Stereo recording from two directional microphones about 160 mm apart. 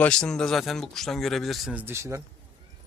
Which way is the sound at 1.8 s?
15° right (ahead or behind).